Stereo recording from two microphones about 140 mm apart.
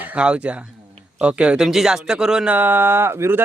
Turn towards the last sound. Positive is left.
turn(degrees=-15)  # may be behind; listen again after turning